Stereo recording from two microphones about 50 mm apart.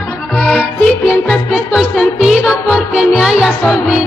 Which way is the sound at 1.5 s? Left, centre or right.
Centre.